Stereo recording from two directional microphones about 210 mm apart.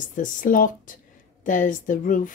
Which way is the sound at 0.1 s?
40° left (ahead or behind).